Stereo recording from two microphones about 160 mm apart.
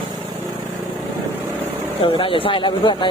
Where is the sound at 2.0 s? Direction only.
35° left (ahead or behind).